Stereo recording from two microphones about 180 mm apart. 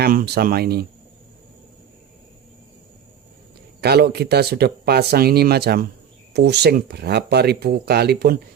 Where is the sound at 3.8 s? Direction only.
65° right (ahead or behind).